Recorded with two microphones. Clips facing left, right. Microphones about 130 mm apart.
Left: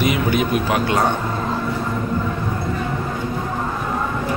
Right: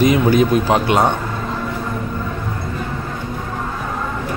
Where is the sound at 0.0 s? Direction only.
35° right (ahead or behind).